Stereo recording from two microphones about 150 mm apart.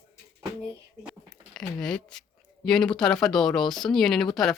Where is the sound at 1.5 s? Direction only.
5° left (ahead or behind).